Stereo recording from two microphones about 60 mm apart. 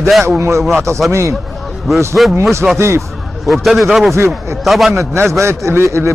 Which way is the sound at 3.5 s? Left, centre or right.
Centre.